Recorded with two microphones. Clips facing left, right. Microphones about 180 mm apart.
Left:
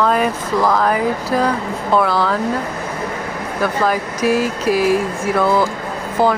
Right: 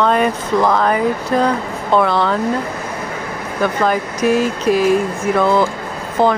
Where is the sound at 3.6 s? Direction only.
5° left (ahead or behind).